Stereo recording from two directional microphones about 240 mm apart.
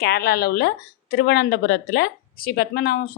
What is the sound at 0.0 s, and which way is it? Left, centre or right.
Speech, left.